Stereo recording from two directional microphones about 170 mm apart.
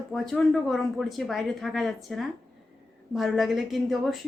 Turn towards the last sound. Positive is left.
turn(degrees=0)  # may be behind; listen again after turning